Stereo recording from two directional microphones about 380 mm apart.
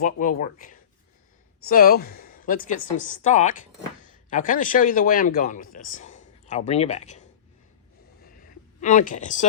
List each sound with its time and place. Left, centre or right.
0.0 s speech: left
8.8 s speech: centre